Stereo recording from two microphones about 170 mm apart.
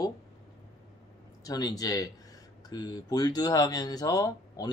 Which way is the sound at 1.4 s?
20° left (ahead or behind).